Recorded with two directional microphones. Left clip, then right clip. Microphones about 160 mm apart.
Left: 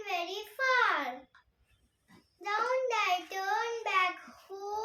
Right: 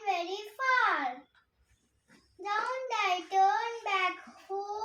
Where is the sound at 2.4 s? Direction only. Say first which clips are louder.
Left 2 dB; 20° left (ahead or behind).